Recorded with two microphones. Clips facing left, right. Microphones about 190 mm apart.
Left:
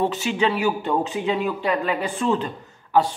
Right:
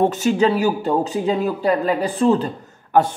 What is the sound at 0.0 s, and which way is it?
Speech, 45° right (ahead or behind).